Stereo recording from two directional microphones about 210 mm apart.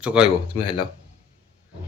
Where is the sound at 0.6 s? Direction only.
25° left (ahead or behind).